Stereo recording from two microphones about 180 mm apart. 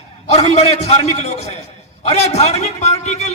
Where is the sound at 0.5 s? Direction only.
40° left (ahead or behind).